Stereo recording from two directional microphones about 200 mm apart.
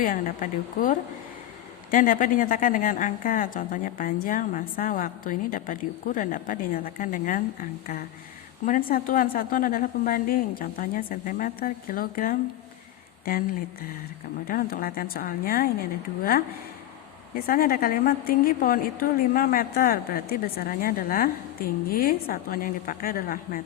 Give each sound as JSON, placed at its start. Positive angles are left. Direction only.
{"t": 0.0, "sound": "a woman's voice", "side_deg": 45}
{"t": 14.4, "sound": "a woman's voice", "side_deg": 45}
{"t": 17.3, "sound": "a woman's voice", "side_deg": 45}